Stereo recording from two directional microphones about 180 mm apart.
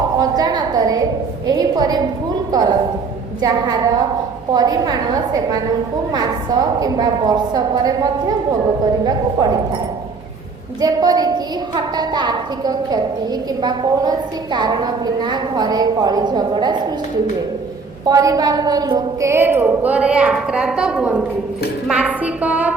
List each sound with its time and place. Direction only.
0.2 s a sound: 20° right (ahead or behind)
1.5 s a woman's voice: 20° right (ahead or behind)
18.0 s a woman's voice: 20° right (ahead or behind)